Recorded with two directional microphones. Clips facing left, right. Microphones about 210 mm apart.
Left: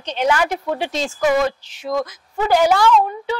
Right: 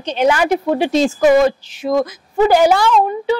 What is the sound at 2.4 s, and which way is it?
Speech, 10° right (ahead or behind).